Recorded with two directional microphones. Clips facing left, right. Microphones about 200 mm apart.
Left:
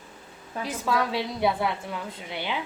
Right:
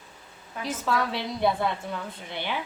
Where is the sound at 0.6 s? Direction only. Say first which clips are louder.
Left 1 dB; 10° left (ahead or behind).